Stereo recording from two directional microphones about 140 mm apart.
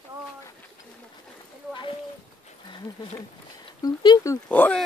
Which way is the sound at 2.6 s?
30° left (ahead or behind).